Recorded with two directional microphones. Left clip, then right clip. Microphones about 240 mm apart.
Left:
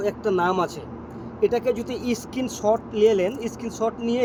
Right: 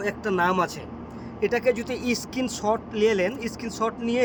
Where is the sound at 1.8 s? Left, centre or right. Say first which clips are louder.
Even; right.